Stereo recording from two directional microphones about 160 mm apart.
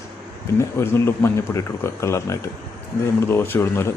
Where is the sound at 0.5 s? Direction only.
15° left (ahead or behind).